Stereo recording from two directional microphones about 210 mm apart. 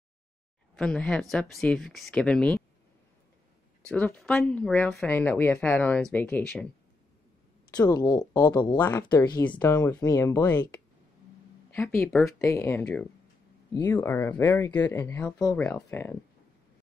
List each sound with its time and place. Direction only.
0.7 s speech: 5° left (ahead or behind)
3.8 s speech: 5° left (ahead or behind)
7.7 s speech: 20° left (ahead or behind)
12.0 s speech: centre (ahead or behind)
12.4 s speech: 15° left (ahead or behind)